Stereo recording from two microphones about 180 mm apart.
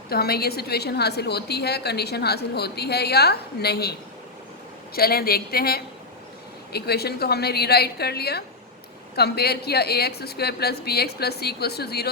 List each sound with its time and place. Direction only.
0.1 s a woman's voice: 60° left (ahead or behind)
4.9 s a woman's voice: 60° left (ahead or behind)